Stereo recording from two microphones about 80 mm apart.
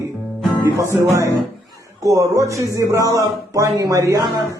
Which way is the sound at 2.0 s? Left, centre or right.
Right.